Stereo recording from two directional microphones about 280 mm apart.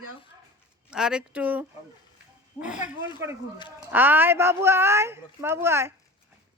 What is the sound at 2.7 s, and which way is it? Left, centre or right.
Speech, left.